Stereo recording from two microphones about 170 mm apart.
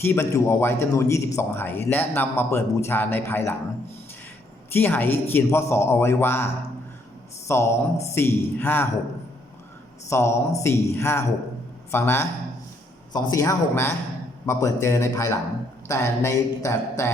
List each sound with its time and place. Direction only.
0.0 s speech: 15° left (ahead or behind)
4.7 s speech: 10° left (ahead or behind)
10.1 s speech: 15° left (ahead or behind)